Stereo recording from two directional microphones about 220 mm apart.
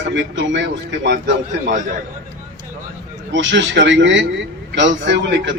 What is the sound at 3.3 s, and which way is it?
A man's voice, 55° right (ahead or behind).